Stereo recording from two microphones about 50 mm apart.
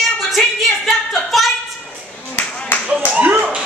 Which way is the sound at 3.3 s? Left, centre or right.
Right.